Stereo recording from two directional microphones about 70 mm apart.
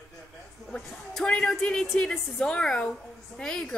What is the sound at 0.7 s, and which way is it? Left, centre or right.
A woman's voice, centre.